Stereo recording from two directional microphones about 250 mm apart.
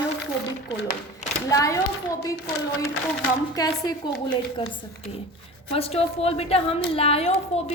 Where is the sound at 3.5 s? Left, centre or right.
Centre.